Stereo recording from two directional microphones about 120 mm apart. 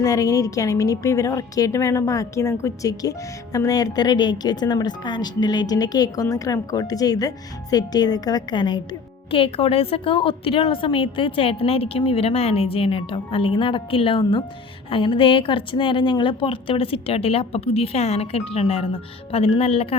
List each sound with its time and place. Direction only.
0.0 s a woman's voice: 30° left (ahead or behind)
9.3 s a woman's voice: 50° left (ahead or behind)